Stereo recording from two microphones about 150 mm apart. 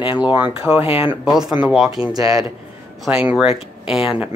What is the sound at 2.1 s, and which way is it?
Speech, 25° right (ahead or behind).